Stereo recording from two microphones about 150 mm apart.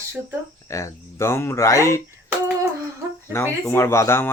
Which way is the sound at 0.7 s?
20° left (ahead or behind).